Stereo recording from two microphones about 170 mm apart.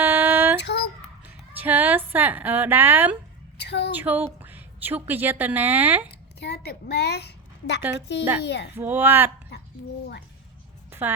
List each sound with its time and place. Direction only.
0.0 s child singing: 10° right (ahead or behind)
0.6 s a sound: 70° left (ahead or behind)
1.2 s a woman's voice: 10° right (ahead or behind)
3.6 s a woman's voice: 80° left
3.9 s a woman's voice: 10° right (ahead or behind)
6.4 s a woman's voice: 70° left (ahead or behind)
8.4 s a child's voice: 85° left
8.7 s speech: 10° right (ahead or behind)